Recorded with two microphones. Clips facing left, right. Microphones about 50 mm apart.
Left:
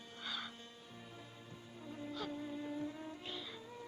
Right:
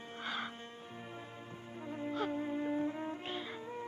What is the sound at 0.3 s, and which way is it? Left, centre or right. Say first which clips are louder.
Music: right 5 dB; right.